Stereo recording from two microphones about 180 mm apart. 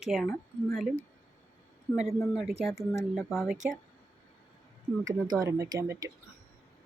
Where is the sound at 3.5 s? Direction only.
45° right (ahead or behind).